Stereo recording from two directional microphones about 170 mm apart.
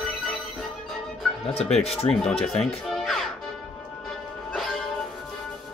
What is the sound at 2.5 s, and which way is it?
Music, 5° left (ahead or behind).